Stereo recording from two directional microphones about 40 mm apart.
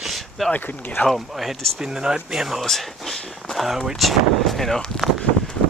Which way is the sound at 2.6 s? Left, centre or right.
Centre.